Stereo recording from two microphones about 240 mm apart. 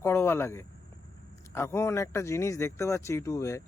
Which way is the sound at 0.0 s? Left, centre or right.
Centre.